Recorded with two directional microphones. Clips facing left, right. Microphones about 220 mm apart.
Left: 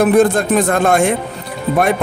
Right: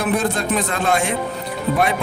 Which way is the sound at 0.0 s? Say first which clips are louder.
Left 9 dB; 50° left (ahead or behind).